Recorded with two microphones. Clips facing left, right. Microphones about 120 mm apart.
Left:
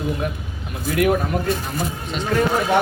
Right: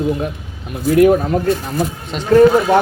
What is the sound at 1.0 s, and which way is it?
Speech, 30° right (ahead or behind).